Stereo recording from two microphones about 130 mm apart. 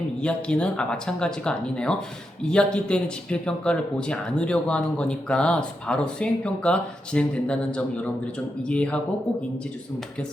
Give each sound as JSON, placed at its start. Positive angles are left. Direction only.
{"t": 0.2, "sound": "speech", "side_deg": 10}